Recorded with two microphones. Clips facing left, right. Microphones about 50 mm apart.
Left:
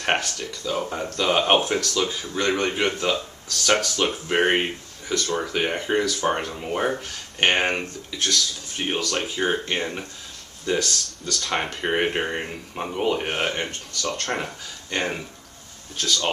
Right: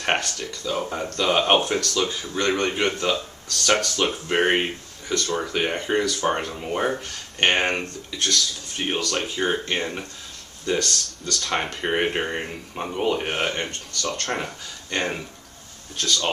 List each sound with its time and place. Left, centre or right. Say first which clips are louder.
0.0 s speech: even; centre